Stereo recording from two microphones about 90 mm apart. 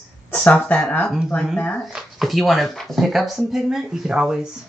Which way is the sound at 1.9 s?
5° right (ahead or behind).